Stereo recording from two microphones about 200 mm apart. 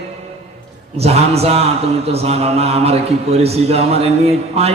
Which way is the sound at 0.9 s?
30° right (ahead or behind).